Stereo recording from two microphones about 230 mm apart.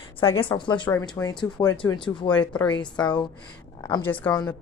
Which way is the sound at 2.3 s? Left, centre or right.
Centre.